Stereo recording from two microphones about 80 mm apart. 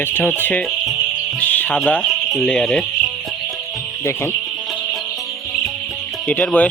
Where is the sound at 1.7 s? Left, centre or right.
Centre.